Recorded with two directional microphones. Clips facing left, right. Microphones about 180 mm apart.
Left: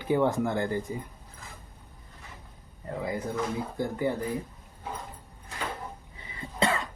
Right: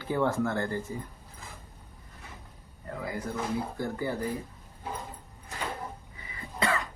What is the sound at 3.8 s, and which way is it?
Speech, 20° left (ahead or behind).